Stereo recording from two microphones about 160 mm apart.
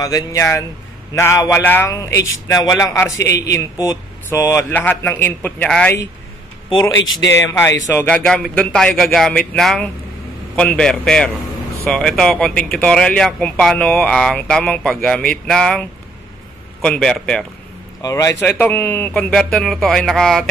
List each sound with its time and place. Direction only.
0.0 s speech: 20° left (ahead or behind)
7.3 s speech: 15° left (ahead or behind)
18.0 s speech: 20° left (ahead or behind); by 20.4 s 5° left (ahead or behind)